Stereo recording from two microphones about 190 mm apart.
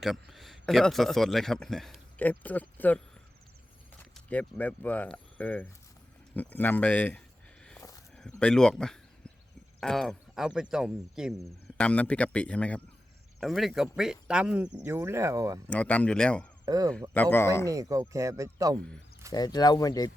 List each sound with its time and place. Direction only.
0.0 s a man's voice: centre (ahead or behind)
4.1 s speech: 10° left (ahead or behind)
7.8 s a sound: 20° left (ahead or behind)
8.3 s speech: 5° left (ahead or behind); by 15.6 s 15° right (ahead or behind)
15.6 s speech: 5° left (ahead or behind)
16.6 s speech: 20° right (ahead or behind)
17.2 s speech: 10° left (ahead or behind)
17.7 s speech: 15° right (ahead or behind)
19.3 s speech: 20° left (ahead or behind)